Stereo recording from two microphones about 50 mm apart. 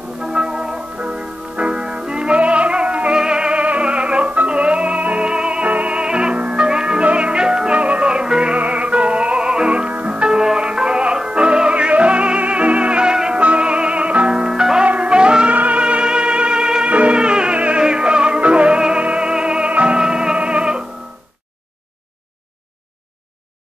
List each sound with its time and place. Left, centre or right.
0.2 s music: centre
14.9 s music: right